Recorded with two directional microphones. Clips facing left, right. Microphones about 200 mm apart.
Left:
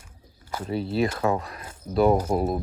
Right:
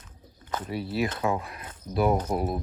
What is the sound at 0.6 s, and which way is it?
Speech, 25° left (ahead or behind).